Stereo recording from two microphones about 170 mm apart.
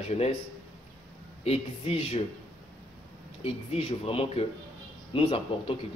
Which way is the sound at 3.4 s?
35° left (ahead or behind).